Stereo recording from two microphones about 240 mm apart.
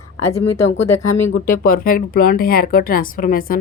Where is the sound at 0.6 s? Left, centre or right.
Left.